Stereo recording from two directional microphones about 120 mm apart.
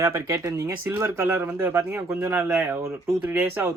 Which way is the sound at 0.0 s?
25° right (ahead or behind).